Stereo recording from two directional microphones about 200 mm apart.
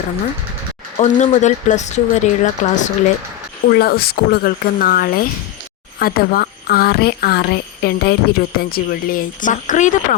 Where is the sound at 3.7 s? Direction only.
50° left (ahead or behind).